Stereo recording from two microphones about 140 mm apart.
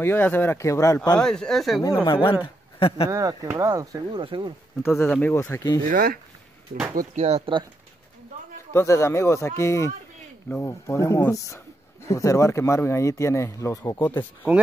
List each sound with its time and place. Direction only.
0.0 s speech: 15° left (ahead or behind)
1.2 s speech: 5° left (ahead or behind)
2.0 s speech: 35° left (ahead or behind)
3.1 s speech: 20° right (ahead or behind)
4.2 s speech: 35° right (ahead or behind)
4.8 s speech: 15° left (ahead or behind)
5.9 s speech: 90° right
7.2 s speech: 50° right (ahead or behind)
8.7 s speech: 20° left (ahead or behind)